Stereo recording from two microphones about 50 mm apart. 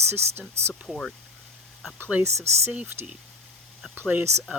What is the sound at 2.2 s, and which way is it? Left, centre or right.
Speech, right.